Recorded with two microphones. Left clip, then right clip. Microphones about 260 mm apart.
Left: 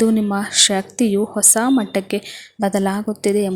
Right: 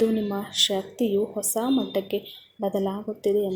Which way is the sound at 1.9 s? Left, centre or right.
Left.